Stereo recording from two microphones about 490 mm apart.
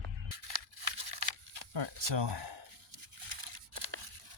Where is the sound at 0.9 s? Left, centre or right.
Right.